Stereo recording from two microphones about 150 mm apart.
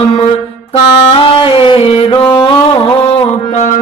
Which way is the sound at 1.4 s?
35° left (ahead or behind).